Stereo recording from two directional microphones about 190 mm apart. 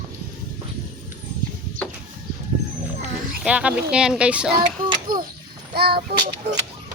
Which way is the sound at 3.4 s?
5° right (ahead or behind).